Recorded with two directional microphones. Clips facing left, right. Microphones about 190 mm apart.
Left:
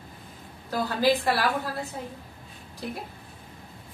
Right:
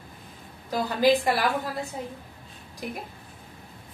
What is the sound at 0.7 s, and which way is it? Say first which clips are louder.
Speech: right 2 dB; 15° right (ahead or behind).